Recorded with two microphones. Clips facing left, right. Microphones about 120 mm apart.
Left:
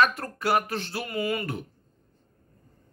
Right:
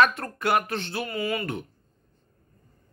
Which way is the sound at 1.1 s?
20° left (ahead or behind).